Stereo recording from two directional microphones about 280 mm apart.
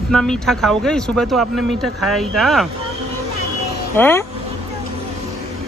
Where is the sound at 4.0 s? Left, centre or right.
Centre.